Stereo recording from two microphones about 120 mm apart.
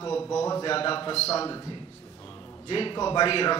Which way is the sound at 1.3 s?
30° left (ahead or behind).